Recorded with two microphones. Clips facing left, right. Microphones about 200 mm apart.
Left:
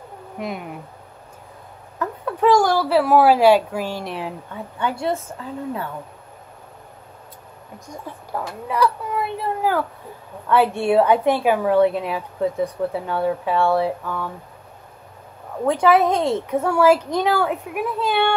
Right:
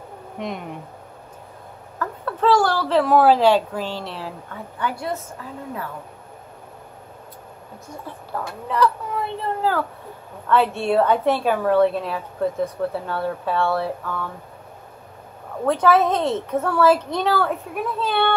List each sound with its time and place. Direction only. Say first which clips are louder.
0.4 s speech: left 1 dB; 5° left (ahead or behind)
2.0 s a woman's voice: left 2 dB; 15° left (ahead or behind)
8.3 s a woman's voice: left 1 dB; 10° left (ahead or behind)
15.6 s a woman's voice: left 1 dB; 15° left (ahead or behind)